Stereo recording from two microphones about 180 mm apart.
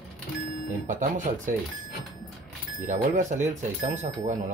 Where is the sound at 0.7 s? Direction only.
45° right (ahead or behind).